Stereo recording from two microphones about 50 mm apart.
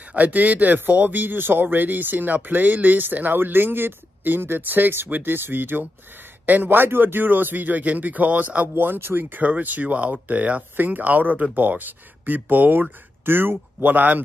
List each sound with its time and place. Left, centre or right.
0.1 s speech: right
8.7 s speech: right
9.4 s speech: right